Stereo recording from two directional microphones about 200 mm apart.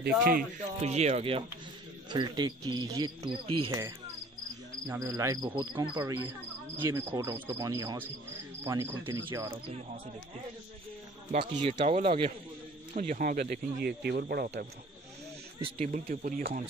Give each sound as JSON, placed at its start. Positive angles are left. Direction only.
{"t": 0.3, "sound": "speech", "side_deg": -45}
{"t": 0.8, "sound": "speech", "side_deg": -35}
{"t": 4.8, "sound": "speech", "side_deg": -15}
{"t": 11.8, "sound": "speech", "side_deg": -30}
{"t": 15.6, "sound": "speech", "side_deg": -40}